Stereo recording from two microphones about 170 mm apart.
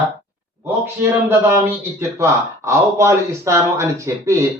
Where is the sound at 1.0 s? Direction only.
15° right (ahead or behind).